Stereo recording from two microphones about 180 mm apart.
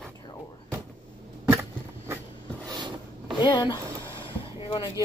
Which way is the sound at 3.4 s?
25° left (ahead or behind).